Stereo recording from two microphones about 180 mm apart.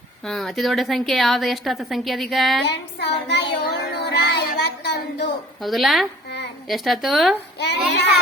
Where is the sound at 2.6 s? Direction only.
70° left (ahead or behind).